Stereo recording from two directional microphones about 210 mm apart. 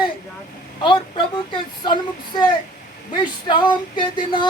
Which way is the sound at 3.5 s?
20° left (ahead or behind).